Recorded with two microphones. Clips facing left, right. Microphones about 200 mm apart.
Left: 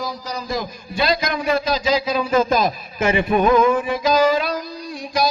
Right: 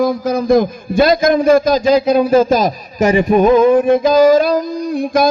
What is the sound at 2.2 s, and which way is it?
A man's voice, 40° right (ahead or behind).